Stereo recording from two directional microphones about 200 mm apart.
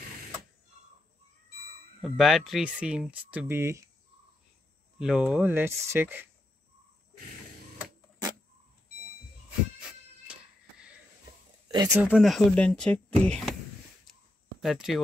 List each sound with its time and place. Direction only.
2.0 s speech: centre (ahead or behind)
4.9 s speech: 5° right (ahead or behind)
11.7 s speech: 15° right (ahead or behind)
12.1 s speech: centre (ahead or behind)
14.6 s speech: centre (ahead or behind)